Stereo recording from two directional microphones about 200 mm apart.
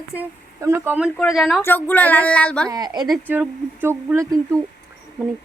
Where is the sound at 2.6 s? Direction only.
20° right (ahead or behind).